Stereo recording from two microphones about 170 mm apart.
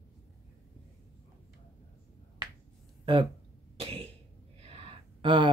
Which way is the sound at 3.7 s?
35° right (ahead or behind).